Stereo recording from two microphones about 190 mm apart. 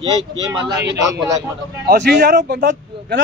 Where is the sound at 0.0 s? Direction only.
20° right (ahead or behind).